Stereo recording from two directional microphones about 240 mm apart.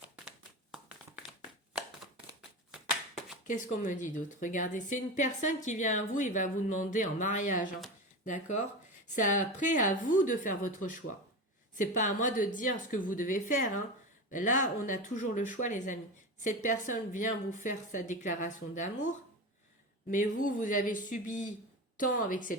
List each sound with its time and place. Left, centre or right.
0.0 s a sound: centre
3.4 s a woman's voice: left
20.1 s a woman's voice: left